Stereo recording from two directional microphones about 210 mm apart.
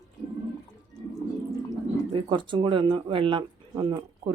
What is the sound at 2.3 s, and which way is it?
Speech, 25° right (ahead or behind).